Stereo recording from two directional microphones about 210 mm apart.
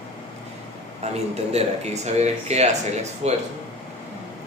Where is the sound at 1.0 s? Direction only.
30° right (ahead or behind).